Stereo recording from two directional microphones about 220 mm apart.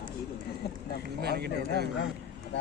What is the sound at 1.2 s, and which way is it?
Speech, 45° right (ahead or behind).